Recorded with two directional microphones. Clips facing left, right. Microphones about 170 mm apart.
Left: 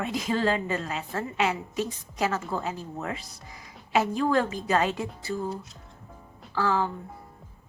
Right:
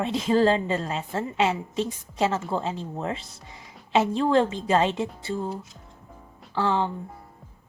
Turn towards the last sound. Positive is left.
turn(degrees=-25)  # may be behind; listen again after turning